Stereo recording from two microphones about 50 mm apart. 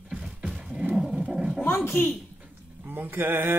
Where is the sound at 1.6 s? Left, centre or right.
Left.